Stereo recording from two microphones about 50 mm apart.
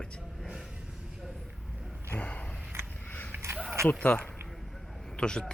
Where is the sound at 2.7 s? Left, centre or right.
Right.